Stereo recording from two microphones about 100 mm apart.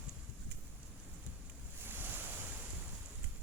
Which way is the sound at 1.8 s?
20° right (ahead or behind).